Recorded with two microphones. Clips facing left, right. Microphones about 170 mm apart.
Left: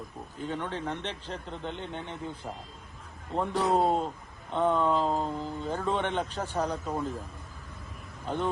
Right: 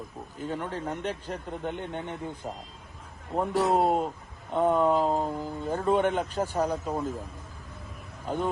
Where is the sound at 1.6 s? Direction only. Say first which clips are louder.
Right 4 dB; 55° right (ahead or behind).